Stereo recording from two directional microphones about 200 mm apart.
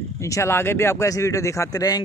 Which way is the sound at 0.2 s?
15° left (ahead or behind).